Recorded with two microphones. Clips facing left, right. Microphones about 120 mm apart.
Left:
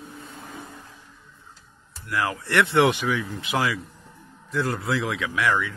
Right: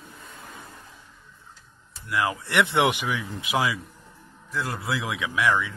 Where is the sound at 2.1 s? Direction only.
15° right (ahead or behind).